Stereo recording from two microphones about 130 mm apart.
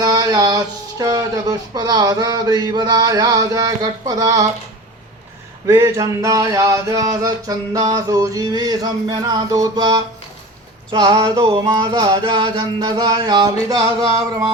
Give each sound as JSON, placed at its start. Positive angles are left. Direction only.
{"t": 0.0, "sound": "speech", "side_deg": -30}
{"t": 5.6, "sound": "a sound", "side_deg": -25}
{"t": 10.9, "sound": "speech", "side_deg": -40}